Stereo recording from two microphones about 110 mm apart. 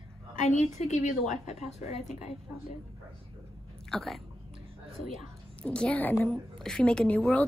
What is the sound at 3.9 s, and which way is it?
Speech, centre (ahead or behind).